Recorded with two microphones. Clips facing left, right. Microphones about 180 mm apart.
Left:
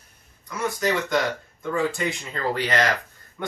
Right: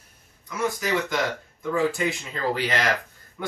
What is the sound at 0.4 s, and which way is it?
Speech, centre (ahead or behind).